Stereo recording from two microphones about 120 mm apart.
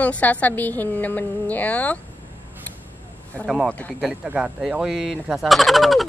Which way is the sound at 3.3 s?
10° left (ahead or behind).